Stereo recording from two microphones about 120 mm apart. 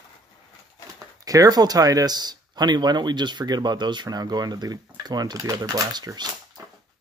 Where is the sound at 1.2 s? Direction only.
30° right (ahead or behind).